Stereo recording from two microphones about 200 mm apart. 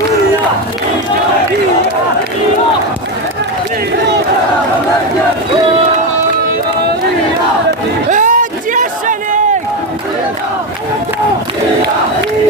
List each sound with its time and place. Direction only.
8.1 s crowd: 40° right (ahead or behind)